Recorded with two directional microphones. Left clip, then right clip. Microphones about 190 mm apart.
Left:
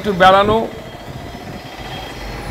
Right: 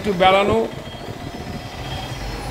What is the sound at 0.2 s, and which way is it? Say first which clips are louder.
Speech: left 5 dB; 5° left (ahead or behind).